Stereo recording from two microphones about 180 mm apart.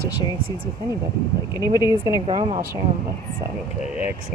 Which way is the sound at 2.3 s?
30° right (ahead or behind).